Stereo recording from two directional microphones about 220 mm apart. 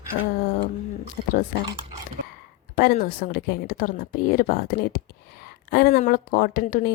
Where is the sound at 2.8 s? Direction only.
45° left (ahead or behind).